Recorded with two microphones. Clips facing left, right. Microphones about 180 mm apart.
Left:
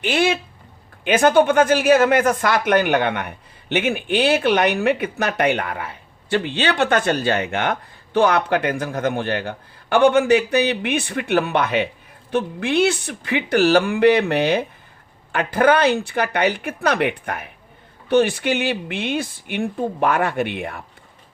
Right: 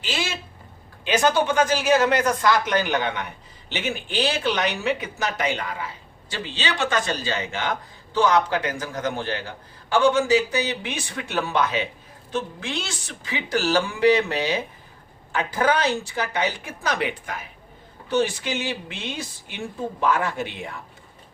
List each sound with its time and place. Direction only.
0.0 s speech: 60° left (ahead or behind)